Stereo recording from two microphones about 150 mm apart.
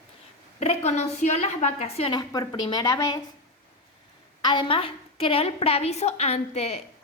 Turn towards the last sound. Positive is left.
turn(degrees=45)  # may be behind; listen again after turning